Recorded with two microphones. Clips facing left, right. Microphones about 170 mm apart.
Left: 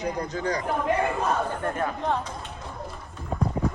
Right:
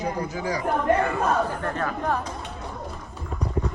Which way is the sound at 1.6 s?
20° left (ahead or behind).